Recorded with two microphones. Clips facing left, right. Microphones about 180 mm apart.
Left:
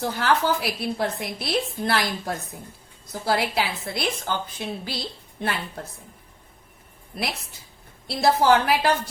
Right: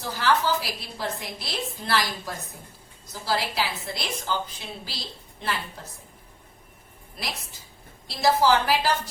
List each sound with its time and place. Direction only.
0.0 s a woman's voice: 60° left (ahead or behind)
7.1 s a woman's voice: 60° left (ahead or behind)